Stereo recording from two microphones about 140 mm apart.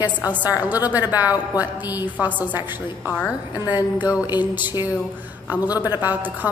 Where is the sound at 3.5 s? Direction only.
25° left (ahead or behind).